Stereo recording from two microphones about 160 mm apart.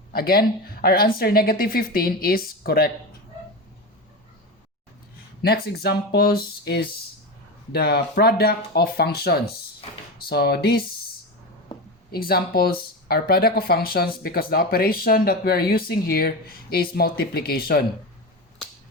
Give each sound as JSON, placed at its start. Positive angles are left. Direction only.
{"t": 0.1, "sound": "speech", "side_deg": 70}
{"t": 5.4, "sound": "speech", "side_deg": 75}
{"t": 11.7, "sound": "a sound", "side_deg": 25}
{"t": 12.1, "sound": "speech", "side_deg": 70}